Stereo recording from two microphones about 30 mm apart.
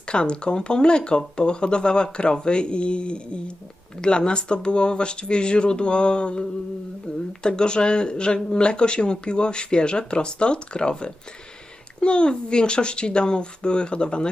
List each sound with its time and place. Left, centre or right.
0.1 s speech: left